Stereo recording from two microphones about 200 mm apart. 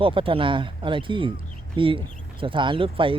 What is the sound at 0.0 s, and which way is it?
Speech, 25° right (ahead or behind).